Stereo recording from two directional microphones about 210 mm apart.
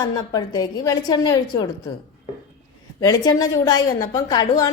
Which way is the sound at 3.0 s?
20° left (ahead or behind).